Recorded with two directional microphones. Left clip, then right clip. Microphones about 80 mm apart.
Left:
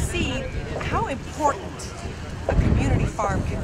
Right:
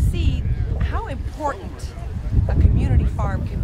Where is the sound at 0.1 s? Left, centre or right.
Left.